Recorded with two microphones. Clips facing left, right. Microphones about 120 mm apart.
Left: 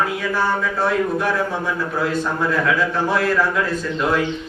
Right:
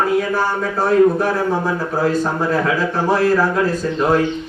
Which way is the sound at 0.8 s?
40° right (ahead or behind).